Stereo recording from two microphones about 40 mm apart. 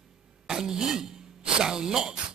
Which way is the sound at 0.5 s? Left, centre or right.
Centre.